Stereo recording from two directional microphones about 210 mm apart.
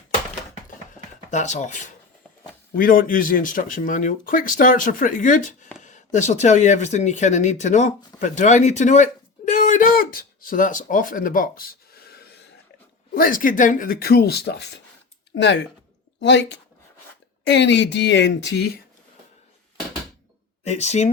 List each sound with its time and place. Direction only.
1.3 s speech: 35° left (ahead or behind)
9.5 s a sound: 40° left (ahead or behind)
13.1 s speech: 40° left (ahead or behind)
20.7 s speech: 30° left (ahead or behind)